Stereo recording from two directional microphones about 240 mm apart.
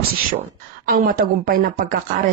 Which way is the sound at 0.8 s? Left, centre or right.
Right.